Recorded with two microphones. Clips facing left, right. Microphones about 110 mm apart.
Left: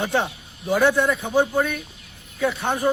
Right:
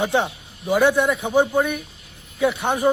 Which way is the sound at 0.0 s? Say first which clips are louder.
Right 2 dB; 15° right (ahead or behind).